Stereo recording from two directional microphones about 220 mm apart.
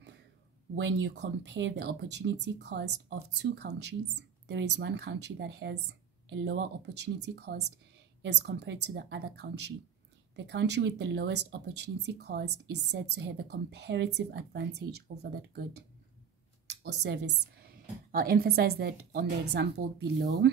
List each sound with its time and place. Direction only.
0.7 s speech: 55° right (ahead or behind)